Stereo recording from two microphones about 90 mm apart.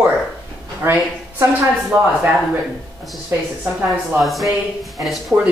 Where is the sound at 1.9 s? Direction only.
15° right (ahead or behind).